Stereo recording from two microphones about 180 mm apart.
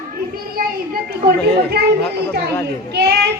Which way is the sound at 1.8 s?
65° right (ahead or behind).